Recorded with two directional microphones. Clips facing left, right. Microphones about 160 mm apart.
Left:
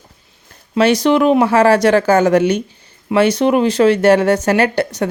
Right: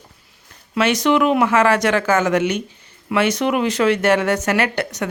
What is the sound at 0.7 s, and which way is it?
Speech, 35° left (ahead or behind).